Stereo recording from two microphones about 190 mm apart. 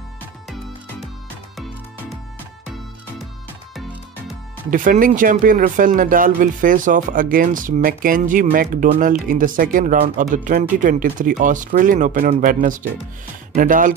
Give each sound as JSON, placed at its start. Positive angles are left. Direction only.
{"t": 4.6, "sound": "speech", "side_deg": -45}